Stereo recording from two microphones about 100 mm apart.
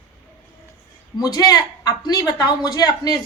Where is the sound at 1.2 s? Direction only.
40° left (ahead or behind).